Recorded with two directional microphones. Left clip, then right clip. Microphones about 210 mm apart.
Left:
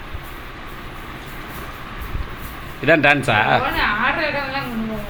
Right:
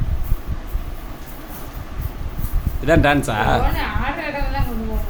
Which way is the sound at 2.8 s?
15° right (ahead or behind).